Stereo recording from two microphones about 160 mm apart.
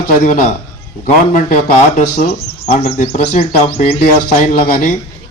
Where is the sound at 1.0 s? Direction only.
50° left (ahead or behind).